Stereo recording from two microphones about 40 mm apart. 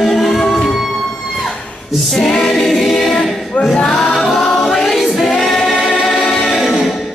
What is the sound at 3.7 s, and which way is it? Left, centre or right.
Music, centre.